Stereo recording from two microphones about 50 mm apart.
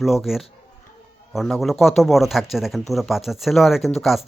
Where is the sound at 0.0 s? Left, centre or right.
Centre.